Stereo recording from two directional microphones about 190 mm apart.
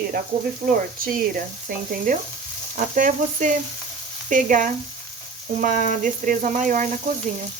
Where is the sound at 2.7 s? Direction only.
45° right (ahead or behind).